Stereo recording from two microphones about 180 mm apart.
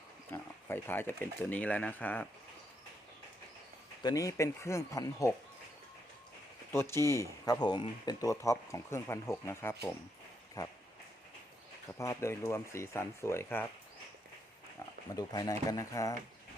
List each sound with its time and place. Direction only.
0.3 s speech: 10° left (ahead or behind)
4.0 s speech: 20° left (ahead or behind)
6.7 s speech: 15° left (ahead or behind)
11.9 s speech: 15° left (ahead or behind)
15.1 s speech: 20° left (ahead or behind)